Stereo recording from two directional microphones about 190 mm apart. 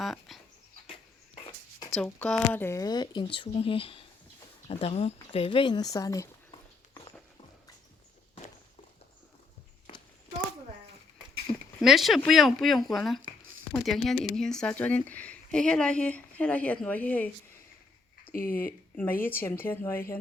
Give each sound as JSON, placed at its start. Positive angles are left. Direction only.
{"t": 0.0, "sound": "dog", "side_deg": 0}
{"t": 2.0, "sound": "speech", "side_deg": 5}
{"t": 11.8, "sound": "speech", "side_deg": 0}
{"t": 18.3, "sound": "speech", "side_deg": 50}
{"t": 18.6, "sound": "speech", "side_deg": 10}